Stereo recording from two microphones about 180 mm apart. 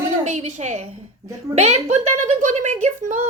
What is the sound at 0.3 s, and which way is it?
A woman's voice, 40° right (ahead or behind).